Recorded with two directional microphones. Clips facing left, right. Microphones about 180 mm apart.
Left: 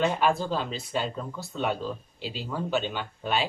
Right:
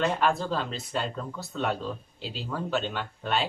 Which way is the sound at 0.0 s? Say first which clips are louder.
Left 1 dB; centre (ahead or behind).